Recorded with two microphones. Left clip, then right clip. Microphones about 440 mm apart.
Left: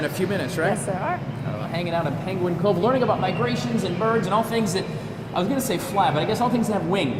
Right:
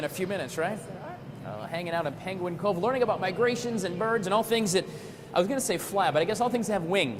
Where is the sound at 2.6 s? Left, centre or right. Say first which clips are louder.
Left 5 dB; right.